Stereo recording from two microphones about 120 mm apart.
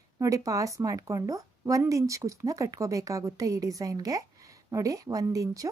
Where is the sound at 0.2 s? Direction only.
30° right (ahead or behind).